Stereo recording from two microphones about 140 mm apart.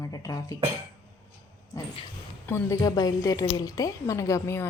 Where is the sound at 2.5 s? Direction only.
25° left (ahead or behind).